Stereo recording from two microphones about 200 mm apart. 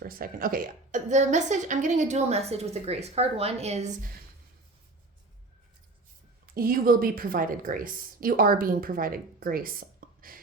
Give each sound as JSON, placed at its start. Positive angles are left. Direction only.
{"t": 0.0, "sound": "a woman's voice", "side_deg": -45}
{"t": 6.4, "sound": "speech", "side_deg": -45}